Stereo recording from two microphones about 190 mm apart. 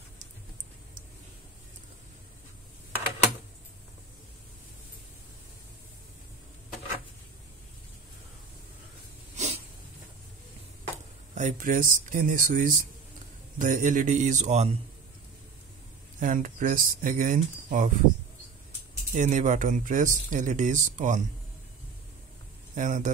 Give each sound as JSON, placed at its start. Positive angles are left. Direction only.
{"t": 9.4, "sound": "a sound", "side_deg": -40}
{"t": 11.3, "sound": "speech", "side_deg": -45}
{"t": 16.2, "sound": "speech", "side_deg": -45}
{"t": 19.1, "sound": "speech", "side_deg": -40}
{"t": 22.8, "sound": "speech", "side_deg": -45}